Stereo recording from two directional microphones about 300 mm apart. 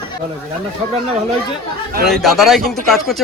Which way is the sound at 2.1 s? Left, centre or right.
Centre.